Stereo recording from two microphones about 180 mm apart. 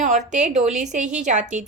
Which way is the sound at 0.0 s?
40° right (ahead or behind).